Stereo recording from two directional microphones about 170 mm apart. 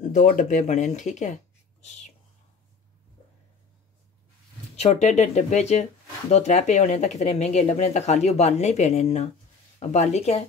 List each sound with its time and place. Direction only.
0.0 s speech: 50° left (ahead or behind)
4.7 s speech: 40° left (ahead or behind)